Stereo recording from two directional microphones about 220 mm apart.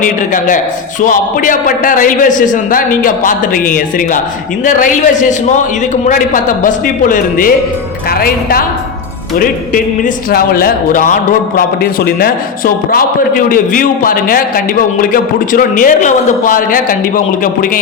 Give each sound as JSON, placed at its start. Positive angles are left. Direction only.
{"t": 0.0, "sound": "a man's voice", "side_deg": 35}